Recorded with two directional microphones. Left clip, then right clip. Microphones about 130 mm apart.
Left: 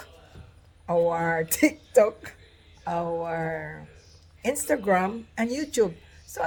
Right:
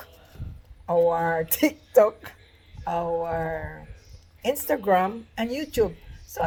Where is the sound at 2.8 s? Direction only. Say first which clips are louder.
Right 2 dB; 25° left (ahead or behind).